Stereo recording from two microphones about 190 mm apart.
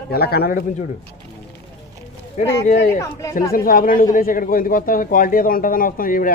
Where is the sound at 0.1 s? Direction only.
55° left (ahead or behind).